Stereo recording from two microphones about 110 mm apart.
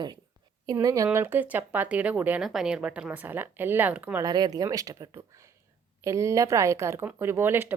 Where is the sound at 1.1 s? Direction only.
20° right (ahead or behind).